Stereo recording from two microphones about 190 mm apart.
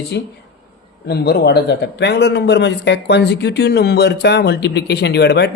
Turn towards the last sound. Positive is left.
turn(degrees=60)  # may be behind; listen again after turning